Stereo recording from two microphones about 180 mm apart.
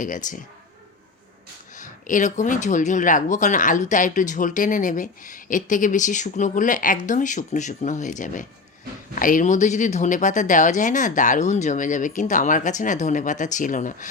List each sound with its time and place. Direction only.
0.0 s speech: 45° left (ahead or behind)
1.7 s speech: 45° left (ahead or behind)